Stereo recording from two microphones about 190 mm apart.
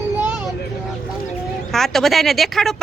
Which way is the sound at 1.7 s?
Centre (ahead or behind).